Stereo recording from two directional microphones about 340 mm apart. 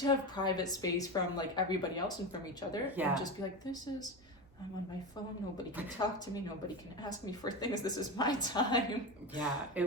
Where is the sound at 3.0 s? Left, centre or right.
Centre.